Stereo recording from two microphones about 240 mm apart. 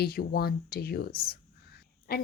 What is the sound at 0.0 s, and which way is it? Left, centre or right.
A woman's voice, left.